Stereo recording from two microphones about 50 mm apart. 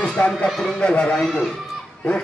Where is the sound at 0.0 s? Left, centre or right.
Centre.